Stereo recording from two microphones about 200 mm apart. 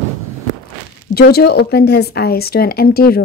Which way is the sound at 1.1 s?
50° left (ahead or behind).